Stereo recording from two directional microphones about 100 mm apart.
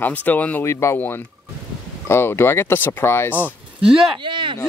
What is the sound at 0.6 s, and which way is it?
Speech, 25° left (ahead or behind).